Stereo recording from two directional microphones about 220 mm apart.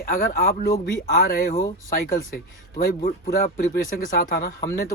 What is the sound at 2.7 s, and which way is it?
Speech, 40° left (ahead or behind).